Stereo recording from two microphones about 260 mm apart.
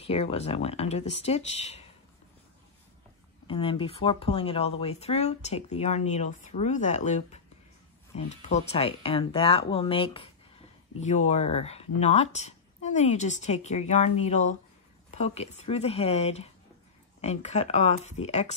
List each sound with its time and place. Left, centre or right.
0.0 s speech: left
3.4 s speech: centre